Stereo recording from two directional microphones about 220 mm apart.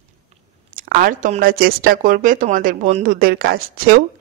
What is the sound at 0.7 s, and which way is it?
Speech, 40° right (ahead or behind).